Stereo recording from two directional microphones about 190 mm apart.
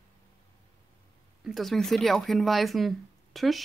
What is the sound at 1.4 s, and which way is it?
Speech, centre (ahead or behind).